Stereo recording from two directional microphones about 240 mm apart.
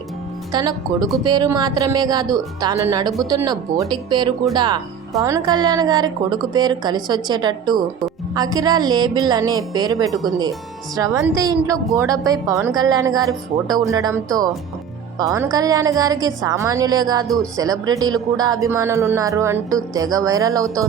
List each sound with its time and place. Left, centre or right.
0.5 s a woman's voice: centre
10.1 s speech: centre
10.9 s a woman's voice: centre
17.2 s speech: centre
17.6 s a woman's voice: centre